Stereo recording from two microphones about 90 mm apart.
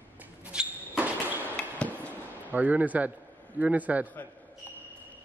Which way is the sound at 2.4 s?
20° right (ahead or behind).